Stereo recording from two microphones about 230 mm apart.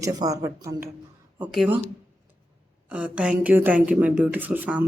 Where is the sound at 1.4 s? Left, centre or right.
Centre.